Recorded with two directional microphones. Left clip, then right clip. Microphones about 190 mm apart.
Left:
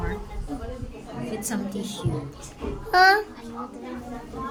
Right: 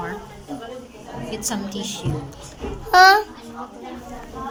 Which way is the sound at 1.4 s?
20° left (ahead or behind).